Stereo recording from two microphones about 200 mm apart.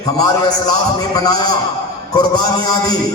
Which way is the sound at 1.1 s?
20° left (ahead or behind).